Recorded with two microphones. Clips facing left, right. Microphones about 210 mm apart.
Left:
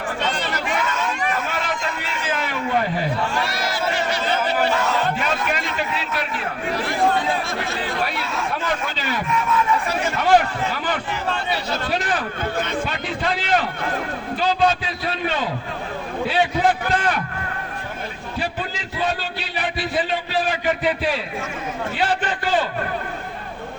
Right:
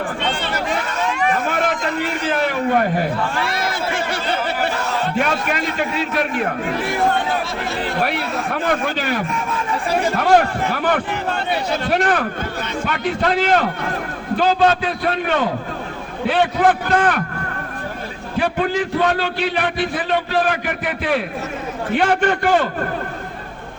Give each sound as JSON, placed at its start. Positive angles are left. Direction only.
{"t": 1.5, "sound": "a sound", "side_deg": -55}
{"t": 5.2, "sound": "a man's voice", "side_deg": -55}
{"t": 8.0, "sound": "a man's voice", "side_deg": -60}
{"t": 9.5, "sound": "speech", "side_deg": -30}
{"t": 10.2, "sound": "a man's voice", "side_deg": -55}
{"t": 18.3, "sound": "a man's voice", "side_deg": -60}
{"t": 21.9, "sound": "a man's voice", "side_deg": -55}